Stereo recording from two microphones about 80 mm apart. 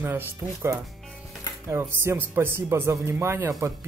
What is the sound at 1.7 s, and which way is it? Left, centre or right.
A man's voice, right.